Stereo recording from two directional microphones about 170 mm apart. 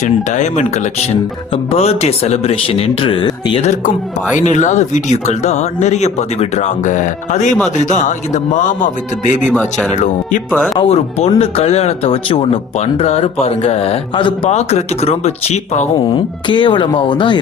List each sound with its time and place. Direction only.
0.0 s speech: 45° left (ahead or behind)
1.7 s speech: 35° left (ahead or behind)
3.6 s speech: 45° left (ahead or behind)
9.5 s speech: 5° left (ahead or behind)
9.9 s speech: 45° left (ahead or behind)
10.8 s speech: 35° left (ahead or behind)
16.0 s speech: 30° left (ahead or behind)